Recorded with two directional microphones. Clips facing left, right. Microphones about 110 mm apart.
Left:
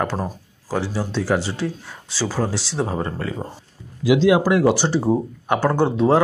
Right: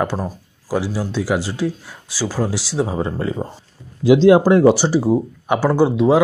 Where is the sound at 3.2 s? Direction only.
20° right (ahead or behind).